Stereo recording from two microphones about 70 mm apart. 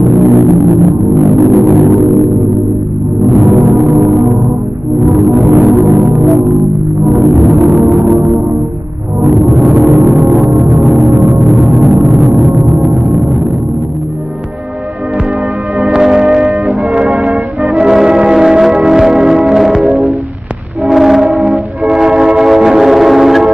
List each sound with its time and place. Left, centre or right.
0.0 s music: centre
1.4 s music: right
2.0 s music: centre
3.3 s gong: right
5.0 s music: centre
5.5 s music: right
5.9 s music: centre
9.7 s gong: right
10.4 s music: centre
15.8 s music: centre
16.6 s music: centre
17.2 s music: centre